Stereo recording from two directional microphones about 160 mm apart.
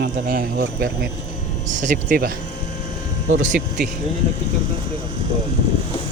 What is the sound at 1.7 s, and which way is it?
Speech, 50° right (ahead or behind).